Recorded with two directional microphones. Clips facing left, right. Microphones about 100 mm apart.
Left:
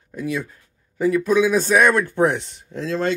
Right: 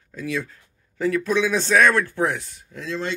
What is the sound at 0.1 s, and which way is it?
Speech, 15° left (ahead or behind).